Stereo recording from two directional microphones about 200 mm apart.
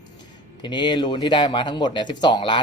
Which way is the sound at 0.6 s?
25° left (ahead or behind).